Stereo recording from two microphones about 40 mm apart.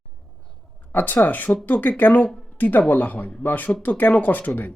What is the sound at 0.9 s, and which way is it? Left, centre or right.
Speech, left.